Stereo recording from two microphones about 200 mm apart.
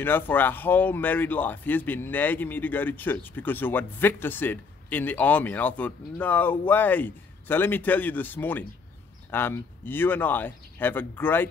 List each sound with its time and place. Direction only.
0.0 s speech: 10° left (ahead or behind)